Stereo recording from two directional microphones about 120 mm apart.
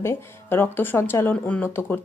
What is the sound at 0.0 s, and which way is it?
Speech, 20° left (ahead or behind).